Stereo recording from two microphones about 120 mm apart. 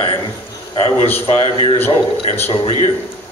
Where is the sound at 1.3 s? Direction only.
55° left (ahead or behind).